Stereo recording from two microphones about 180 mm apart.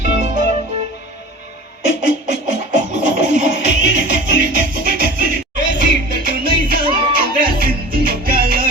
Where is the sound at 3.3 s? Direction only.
45° right (ahead or behind).